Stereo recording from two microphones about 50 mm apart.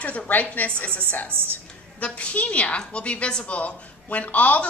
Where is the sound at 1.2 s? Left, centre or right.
Right.